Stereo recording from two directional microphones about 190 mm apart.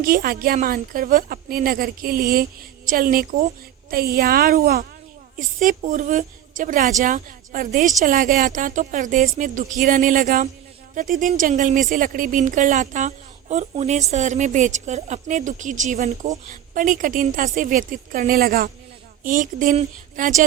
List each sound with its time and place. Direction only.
0.0 s a woman's voice: 50° right (ahead or behind)